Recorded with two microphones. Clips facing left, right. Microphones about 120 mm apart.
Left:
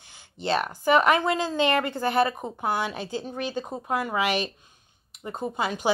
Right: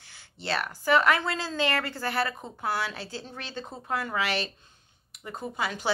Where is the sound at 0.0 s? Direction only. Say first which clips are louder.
Left 6 dB; 20° left (ahead or behind).